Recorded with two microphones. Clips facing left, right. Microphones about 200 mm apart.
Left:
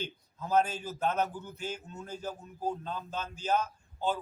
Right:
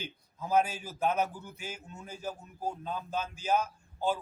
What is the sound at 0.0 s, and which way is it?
A man's voice, 10° right (ahead or behind).